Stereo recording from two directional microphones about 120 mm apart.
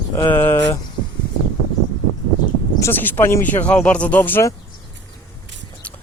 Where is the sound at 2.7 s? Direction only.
20° left (ahead or behind).